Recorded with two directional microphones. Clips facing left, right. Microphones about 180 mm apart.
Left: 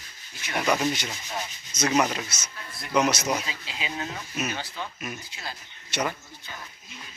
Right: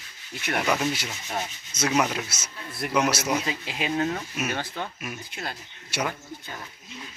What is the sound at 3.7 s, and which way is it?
Speech, 55° right (ahead or behind).